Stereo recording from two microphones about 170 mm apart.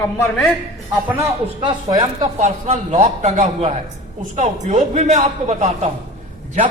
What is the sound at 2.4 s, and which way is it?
A man's voice, 40° right (ahead or behind).